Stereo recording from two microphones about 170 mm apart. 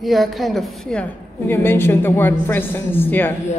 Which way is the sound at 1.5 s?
15° left (ahead or behind).